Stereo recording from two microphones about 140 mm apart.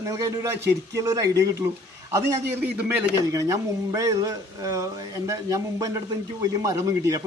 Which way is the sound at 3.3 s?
25° right (ahead or behind).